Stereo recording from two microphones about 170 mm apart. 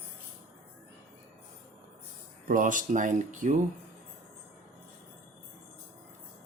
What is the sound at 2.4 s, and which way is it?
Speech, 50° right (ahead or behind).